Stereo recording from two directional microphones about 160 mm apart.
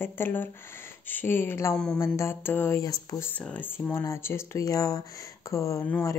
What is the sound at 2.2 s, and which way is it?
Speech, 15° left (ahead or behind).